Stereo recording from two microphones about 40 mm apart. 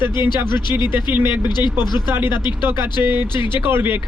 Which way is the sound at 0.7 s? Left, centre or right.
Right.